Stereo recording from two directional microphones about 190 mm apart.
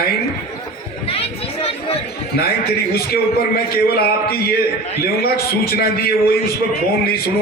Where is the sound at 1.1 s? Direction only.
30° left (ahead or behind).